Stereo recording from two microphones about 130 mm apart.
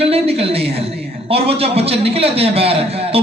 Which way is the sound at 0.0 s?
50° right (ahead or behind).